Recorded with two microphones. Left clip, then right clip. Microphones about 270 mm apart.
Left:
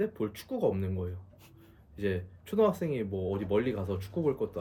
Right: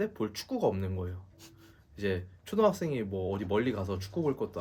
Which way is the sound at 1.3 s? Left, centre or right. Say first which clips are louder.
Right 3 dB; right.